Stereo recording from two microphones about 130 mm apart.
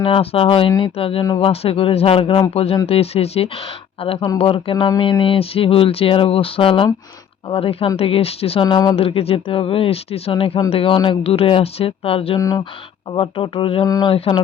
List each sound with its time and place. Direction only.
0.0 s speech: 45° left (ahead or behind)
8.6 s speech: 30° left (ahead or behind)
9.0 s speech: 50° left (ahead or behind)
12.4 s speech: 25° left (ahead or behind)
13.1 s speech: 45° left (ahead or behind)
13.8 s speech: 30° left (ahead or behind)
14.1 s a sound: 40° left (ahead or behind)